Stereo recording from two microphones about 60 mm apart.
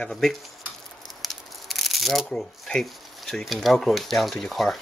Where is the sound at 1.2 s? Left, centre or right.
Centre.